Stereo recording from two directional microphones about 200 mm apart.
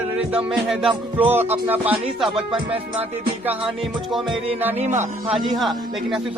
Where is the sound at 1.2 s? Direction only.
10° right (ahead or behind).